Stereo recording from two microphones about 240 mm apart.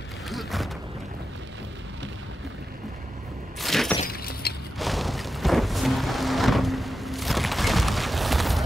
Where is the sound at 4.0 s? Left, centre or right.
Left.